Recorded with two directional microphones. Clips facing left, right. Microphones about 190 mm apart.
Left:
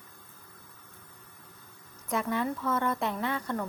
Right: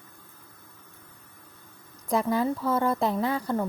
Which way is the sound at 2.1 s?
35° right (ahead or behind).